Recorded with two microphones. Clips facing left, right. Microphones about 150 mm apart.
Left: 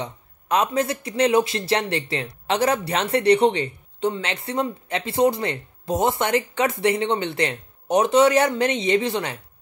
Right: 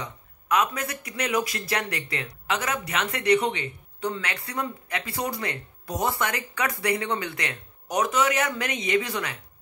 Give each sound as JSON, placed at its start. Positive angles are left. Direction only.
{"t": 0.0, "sound": "speech", "side_deg": 30}